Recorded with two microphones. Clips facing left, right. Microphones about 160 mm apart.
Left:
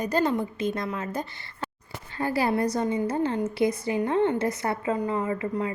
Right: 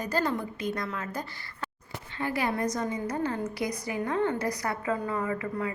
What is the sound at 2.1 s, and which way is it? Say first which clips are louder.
A woman's voice: left 5 dB; 35° left (ahead or behind).